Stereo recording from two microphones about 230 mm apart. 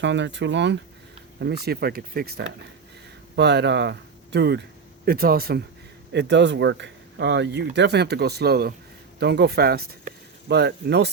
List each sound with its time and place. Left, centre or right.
0.0 s speech: right